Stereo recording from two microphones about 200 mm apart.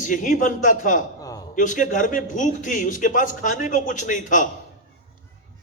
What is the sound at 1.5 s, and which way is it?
A man's voice, 40° left (ahead or behind).